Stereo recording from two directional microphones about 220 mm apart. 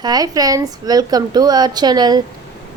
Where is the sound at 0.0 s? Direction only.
15° right (ahead or behind).